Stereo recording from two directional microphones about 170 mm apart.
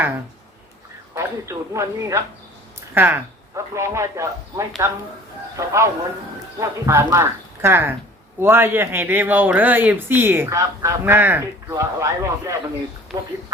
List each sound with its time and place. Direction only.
1.1 s speech: 15° right (ahead or behind)